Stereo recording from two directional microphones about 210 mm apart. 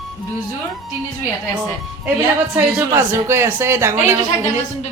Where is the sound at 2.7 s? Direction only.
10° right (ahead or behind).